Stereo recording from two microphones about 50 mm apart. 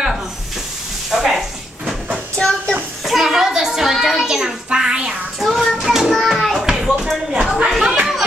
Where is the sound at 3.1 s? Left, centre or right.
Centre.